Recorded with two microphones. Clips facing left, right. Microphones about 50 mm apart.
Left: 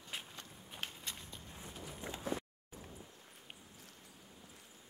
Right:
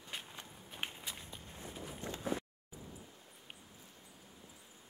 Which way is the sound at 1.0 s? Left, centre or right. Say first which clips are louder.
Right 1 dB; centre.